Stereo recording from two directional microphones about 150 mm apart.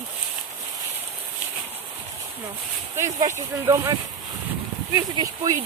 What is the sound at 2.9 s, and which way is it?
Speech, 20° right (ahead or behind).